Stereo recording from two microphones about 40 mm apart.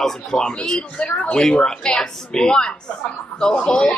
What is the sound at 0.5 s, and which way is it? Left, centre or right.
Speech, left.